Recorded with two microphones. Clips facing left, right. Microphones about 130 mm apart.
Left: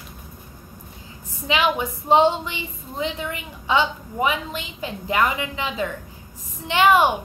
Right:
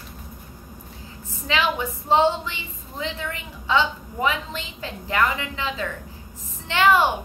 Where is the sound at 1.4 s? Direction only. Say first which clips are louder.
Left 2 dB; 15° left (ahead or behind).